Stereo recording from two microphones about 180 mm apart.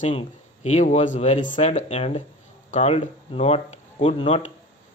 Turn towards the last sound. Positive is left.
turn(degrees=30)  # may be behind; listen again after turning